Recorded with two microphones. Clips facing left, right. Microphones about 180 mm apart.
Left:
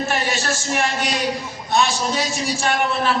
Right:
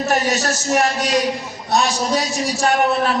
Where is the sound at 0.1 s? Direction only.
40° right (ahead or behind).